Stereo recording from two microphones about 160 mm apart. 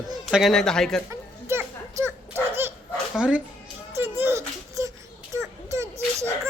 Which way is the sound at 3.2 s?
5° right (ahead or behind).